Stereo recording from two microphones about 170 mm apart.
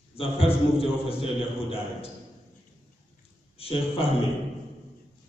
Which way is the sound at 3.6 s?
35° left (ahead or behind).